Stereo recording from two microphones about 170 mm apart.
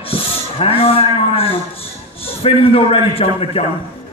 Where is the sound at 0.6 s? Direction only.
35° left (ahead or behind).